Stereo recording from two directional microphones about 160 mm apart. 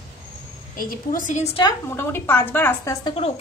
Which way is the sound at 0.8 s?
60° left (ahead or behind).